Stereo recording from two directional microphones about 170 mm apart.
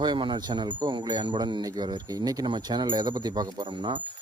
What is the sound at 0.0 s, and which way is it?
Speech, 25° right (ahead or behind).